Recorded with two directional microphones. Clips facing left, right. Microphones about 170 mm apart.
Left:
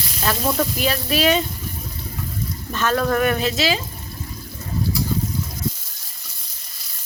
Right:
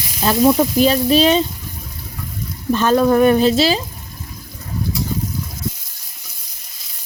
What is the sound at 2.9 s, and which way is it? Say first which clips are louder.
Speech: right 7 dB; 20° right (ahead or behind).